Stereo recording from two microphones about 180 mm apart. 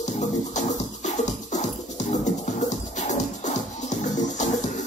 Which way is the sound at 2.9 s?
40° left (ahead or behind).